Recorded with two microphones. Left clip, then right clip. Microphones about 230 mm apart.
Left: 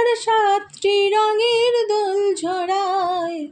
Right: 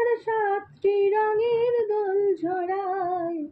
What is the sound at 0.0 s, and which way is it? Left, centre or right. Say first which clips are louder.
Female singing: left 7 dB; left.